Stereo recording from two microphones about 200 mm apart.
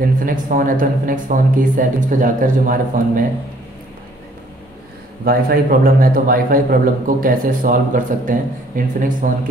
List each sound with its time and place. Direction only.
0.2 s a man's voice: 45° right (ahead or behind)
5.2 s a man's voice: 45° right (ahead or behind)